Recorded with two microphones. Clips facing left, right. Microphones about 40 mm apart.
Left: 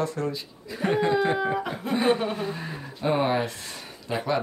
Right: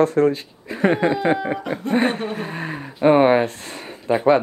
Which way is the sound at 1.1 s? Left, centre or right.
Centre.